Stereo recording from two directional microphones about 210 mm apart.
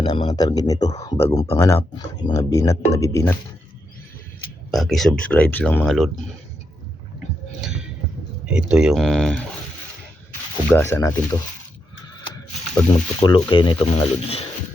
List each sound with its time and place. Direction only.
0.0 s speech: 20° left (ahead or behind)
4.7 s speech: centre (ahead or behind)
8.5 s speech: 5° right (ahead or behind)
10.7 s speech: 10° left (ahead or behind)
13.1 s speech: 20° left (ahead or behind)